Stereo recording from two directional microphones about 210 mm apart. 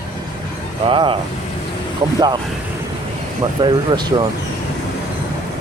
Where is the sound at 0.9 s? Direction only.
25° right (ahead or behind).